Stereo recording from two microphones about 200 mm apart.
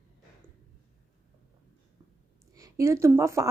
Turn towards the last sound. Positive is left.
turn(degrees=-15)  # may be behind; listen again after turning